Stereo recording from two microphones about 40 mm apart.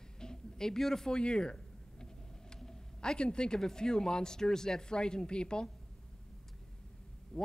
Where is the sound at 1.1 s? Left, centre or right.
Left.